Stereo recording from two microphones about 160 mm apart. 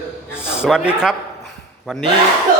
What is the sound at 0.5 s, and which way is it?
A man's voice, 5° right (ahead or behind).